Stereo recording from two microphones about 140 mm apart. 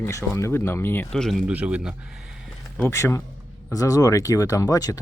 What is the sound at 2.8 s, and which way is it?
Speech, 20° left (ahead or behind).